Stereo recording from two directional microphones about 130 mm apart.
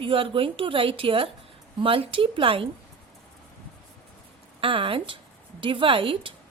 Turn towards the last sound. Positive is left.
turn(degrees=-45)  # may be behind; listen again after turning